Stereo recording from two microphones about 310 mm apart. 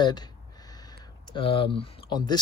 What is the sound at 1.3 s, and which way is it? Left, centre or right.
Speech, centre.